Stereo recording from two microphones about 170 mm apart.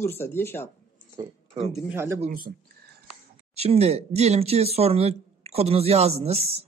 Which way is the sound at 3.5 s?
35° right (ahead or behind).